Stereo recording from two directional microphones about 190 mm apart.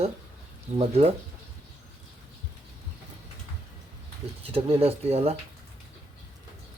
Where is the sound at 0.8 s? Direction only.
30° right (ahead or behind).